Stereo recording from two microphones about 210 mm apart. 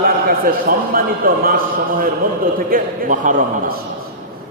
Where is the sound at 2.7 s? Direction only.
40° right (ahead or behind).